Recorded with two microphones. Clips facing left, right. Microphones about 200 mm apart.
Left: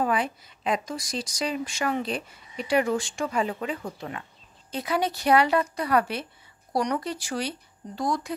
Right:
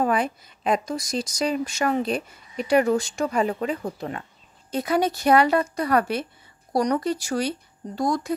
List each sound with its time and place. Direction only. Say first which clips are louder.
0.0 s a woman's voice: right 3 dB; 45° right (ahead or behind)